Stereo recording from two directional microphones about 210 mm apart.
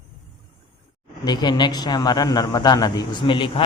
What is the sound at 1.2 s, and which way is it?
A man's voice, 20° left (ahead or behind).